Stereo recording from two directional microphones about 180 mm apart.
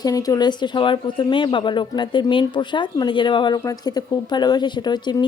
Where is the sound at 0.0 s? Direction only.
20° left (ahead or behind).